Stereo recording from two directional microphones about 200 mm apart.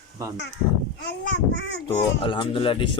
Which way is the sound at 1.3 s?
65° left (ahead or behind).